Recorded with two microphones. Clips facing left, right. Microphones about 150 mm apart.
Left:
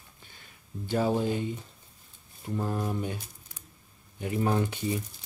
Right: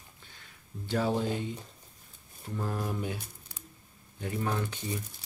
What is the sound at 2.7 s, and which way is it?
Speech, centre (ahead or behind).